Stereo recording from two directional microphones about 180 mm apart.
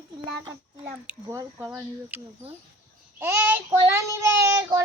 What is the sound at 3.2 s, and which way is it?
Speech, 15° right (ahead or behind).